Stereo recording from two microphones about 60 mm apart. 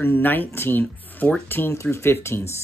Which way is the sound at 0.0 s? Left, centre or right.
Left.